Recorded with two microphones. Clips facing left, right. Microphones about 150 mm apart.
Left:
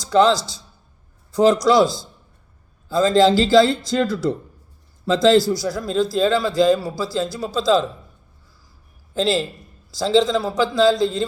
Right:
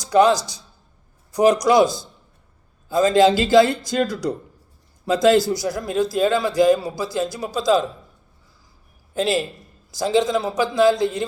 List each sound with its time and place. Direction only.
0.0 s a man's voice: 15° right (ahead or behind)
9.1 s a man's voice: 15° right (ahead or behind)